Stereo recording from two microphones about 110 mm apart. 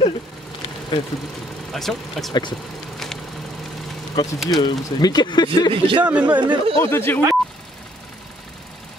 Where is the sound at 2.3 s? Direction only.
40° left (ahead or behind).